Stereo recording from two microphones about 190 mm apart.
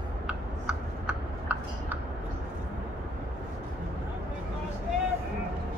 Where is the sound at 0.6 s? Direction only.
5° right (ahead or behind).